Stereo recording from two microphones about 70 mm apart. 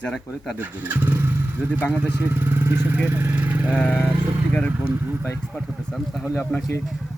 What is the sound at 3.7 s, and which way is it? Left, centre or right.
Speech, centre.